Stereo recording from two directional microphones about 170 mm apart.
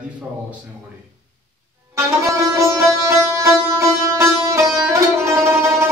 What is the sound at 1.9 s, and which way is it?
Sitar, 15° right (ahead or behind).